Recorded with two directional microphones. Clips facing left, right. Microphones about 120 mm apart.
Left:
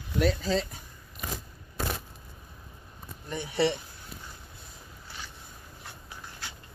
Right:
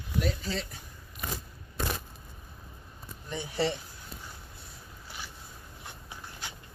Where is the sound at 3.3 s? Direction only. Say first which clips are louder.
Left 3 dB; 60° left (ahead or behind).